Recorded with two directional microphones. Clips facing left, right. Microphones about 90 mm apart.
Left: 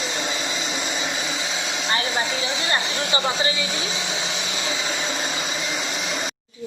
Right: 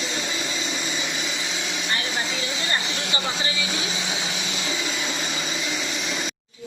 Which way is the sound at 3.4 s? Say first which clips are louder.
Left 3 dB; 35° left (ahead or behind).